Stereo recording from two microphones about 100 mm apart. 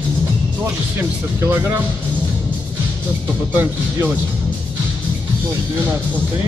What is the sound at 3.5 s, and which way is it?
Speech, 20° right (ahead or behind).